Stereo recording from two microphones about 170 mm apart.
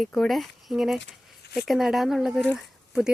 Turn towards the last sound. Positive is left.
turn(degrees=0)  # may be behind; listen again after turning